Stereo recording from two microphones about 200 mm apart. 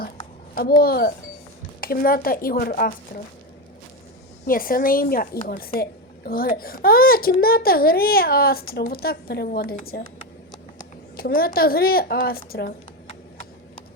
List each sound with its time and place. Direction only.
0.5 s a child's voice: 50° left (ahead or behind)
4.4 s a child's voice: 45° left (ahead or behind)
13.1 s clip-clop: 30° left (ahead or behind)